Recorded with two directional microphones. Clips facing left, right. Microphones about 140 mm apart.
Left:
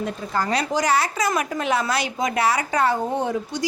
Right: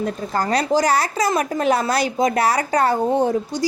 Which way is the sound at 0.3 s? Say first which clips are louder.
Right 4 dB; 35° right (ahead or behind).